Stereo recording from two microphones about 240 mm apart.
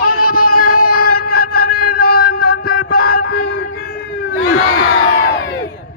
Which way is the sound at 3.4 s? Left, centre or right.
Left.